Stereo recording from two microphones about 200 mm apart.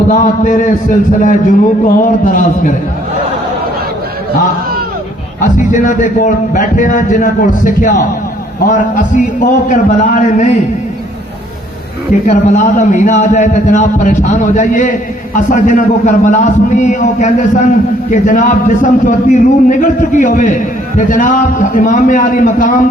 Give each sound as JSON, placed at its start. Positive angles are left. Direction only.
{"t": 0.1, "sound": "a man's voice", "side_deg": 40}
{"t": 5.4, "sound": "a man's voice", "side_deg": 40}
{"t": 12.2, "sound": "a man's voice", "side_deg": 40}